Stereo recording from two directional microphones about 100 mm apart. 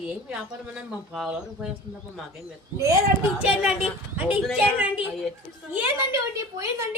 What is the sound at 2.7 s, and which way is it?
Speech, 30° right (ahead or behind).